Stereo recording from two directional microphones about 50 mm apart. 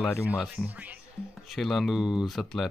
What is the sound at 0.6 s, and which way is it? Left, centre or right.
Speech, left.